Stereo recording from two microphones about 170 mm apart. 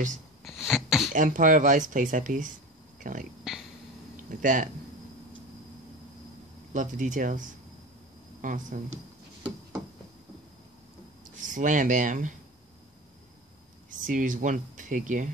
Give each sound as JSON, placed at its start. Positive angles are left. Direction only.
{"t": 0.4, "sound": "a sound", "side_deg": 0}
{"t": 1.1, "sound": "speech", "side_deg": -50}
{"t": 6.7, "sound": "speech", "side_deg": -50}
{"t": 11.2, "sound": "speech", "side_deg": -50}
{"t": 13.8, "sound": "speech", "side_deg": -50}